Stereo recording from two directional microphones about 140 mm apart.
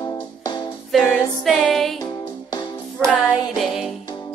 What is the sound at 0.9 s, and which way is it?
Music, 5° left (ahead or behind).